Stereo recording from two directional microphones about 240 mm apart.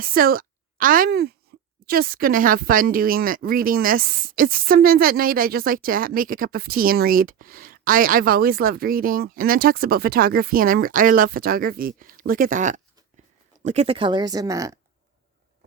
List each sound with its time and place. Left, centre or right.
0.0 s a woman's voice: right; by 14.8 s centre